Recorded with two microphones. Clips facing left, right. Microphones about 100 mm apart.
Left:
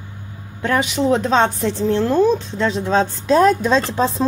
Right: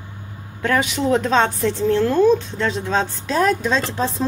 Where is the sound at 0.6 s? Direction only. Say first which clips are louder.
Left 1 dB; 20° left (ahead or behind).